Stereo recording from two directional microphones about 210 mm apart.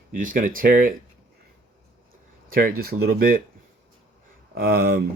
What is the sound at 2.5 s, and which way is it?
Speech, 45° right (ahead or behind).